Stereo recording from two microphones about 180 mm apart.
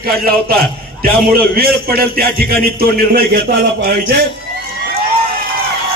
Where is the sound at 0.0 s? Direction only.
55° right (ahead or behind).